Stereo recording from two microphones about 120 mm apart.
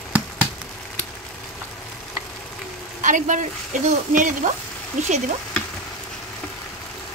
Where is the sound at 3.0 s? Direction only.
90° right.